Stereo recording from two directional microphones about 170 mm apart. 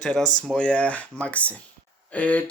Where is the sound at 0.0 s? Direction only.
5° left (ahead or behind).